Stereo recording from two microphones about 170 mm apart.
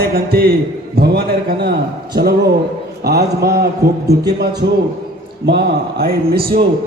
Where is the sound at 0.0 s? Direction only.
65° right (ahead or behind).